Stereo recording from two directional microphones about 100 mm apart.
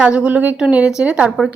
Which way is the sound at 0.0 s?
10° right (ahead or behind).